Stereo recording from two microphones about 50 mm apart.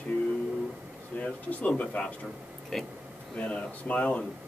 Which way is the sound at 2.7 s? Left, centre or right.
Centre.